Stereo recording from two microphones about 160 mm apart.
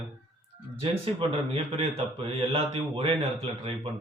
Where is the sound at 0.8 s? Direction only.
35° right (ahead or behind).